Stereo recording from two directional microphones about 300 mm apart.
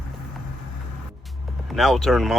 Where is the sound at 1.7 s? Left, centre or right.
Centre.